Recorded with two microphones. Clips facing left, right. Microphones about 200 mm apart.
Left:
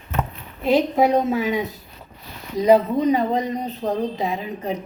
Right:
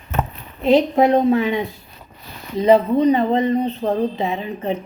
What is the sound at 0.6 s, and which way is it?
Speech, 5° left (ahead or behind).